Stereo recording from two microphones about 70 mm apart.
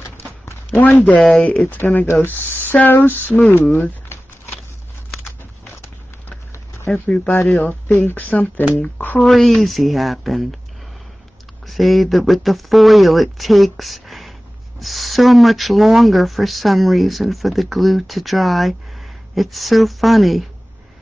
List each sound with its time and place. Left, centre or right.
0.5 s a sound: left
1.0 s speech: centre
3.7 s crumpling: left
6.9 s speech: centre
9.2 s speech: centre
11.6 s speech: centre